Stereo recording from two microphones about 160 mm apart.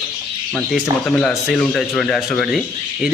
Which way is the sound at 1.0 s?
5° left (ahead or behind).